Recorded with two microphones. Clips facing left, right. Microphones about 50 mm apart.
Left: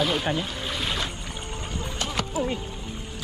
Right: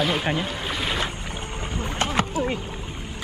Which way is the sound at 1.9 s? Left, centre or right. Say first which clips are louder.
Right 4 dB; right.